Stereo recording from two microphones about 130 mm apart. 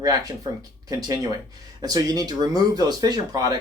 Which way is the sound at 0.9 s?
30° right (ahead or behind).